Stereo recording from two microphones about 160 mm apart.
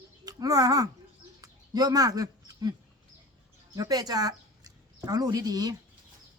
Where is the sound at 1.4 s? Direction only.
25° right (ahead or behind).